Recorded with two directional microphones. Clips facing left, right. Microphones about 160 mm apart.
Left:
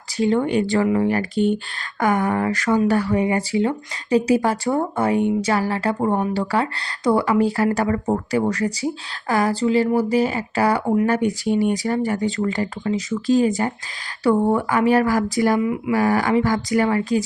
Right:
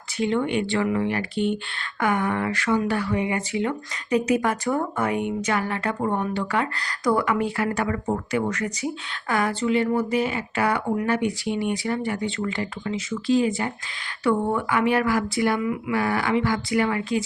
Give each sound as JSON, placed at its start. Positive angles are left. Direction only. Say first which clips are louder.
{"t": 0.2, "sound": "speech", "louder": "left 4 dB", "side_deg": 40}